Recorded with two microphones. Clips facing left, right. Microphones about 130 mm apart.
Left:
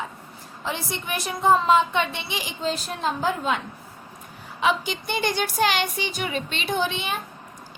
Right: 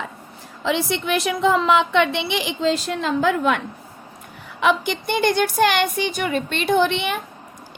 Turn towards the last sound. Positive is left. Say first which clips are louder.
# right 7 dB
turn(degrees=-65)  # may be behind; listen again after turning